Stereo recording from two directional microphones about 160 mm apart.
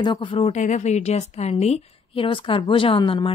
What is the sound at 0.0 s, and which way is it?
Speech, 30° left (ahead or behind).